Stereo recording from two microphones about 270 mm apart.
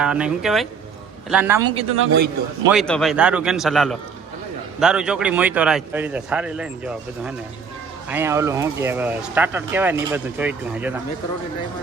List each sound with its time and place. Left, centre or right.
0.0 s a man's voice: centre
2.0 s a man's voice: right
2.6 s a man's voice: centre